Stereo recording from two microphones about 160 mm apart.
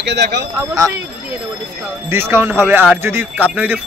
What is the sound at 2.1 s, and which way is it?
Speech, 15° right (ahead or behind).